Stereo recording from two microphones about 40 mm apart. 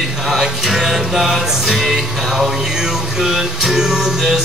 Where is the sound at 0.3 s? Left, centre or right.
Centre.